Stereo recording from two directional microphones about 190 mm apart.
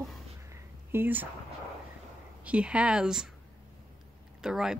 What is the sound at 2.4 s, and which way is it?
Speech, 5° right (ahead or behind).